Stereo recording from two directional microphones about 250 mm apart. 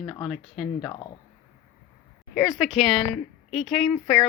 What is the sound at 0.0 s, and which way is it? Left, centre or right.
Speech, centre.